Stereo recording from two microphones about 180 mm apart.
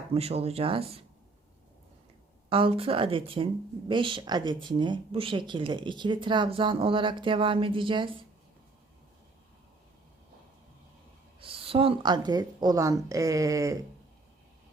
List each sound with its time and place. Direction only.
0.1 s speech: 35° right (ahead or behind)
2.5 s speech: 30° right (ahead or behind)
11.3 s speech: 30° right (ahead or behind)